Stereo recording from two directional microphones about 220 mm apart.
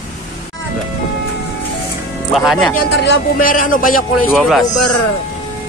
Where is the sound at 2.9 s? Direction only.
50° left (ahead or behind).